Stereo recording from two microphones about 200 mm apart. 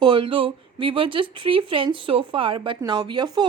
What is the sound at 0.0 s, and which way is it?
Speech, 25° right (ahead or behind).